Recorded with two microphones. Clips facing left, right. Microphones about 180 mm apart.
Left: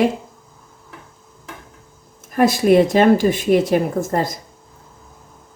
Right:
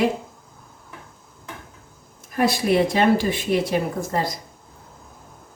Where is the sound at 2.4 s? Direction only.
45° left (ahead or behind).